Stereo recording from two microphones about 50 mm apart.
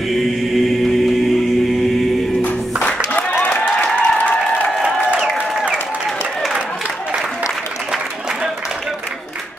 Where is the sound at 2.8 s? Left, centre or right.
Left.